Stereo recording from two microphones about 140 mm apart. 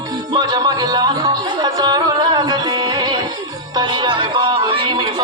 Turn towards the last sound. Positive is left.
turn(degrees=-35)  # may be behind; listen again after turning